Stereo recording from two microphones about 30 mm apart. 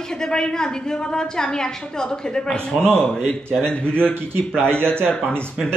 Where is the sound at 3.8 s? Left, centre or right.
Left.